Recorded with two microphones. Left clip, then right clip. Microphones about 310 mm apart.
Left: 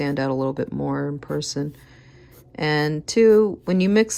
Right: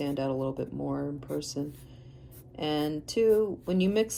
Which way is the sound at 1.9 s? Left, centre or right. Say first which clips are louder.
Left 6 dB; left.